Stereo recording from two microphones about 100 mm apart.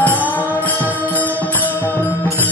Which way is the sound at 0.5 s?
20° left (ahead or behind).